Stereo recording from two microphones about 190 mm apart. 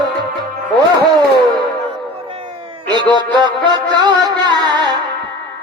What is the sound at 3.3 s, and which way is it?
Music, 25° right (ahead or behind).